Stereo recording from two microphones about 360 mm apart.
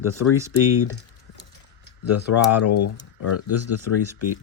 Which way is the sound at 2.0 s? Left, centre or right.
Left.